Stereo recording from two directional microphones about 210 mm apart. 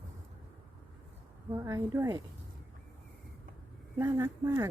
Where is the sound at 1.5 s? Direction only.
15° right (ahead or behind).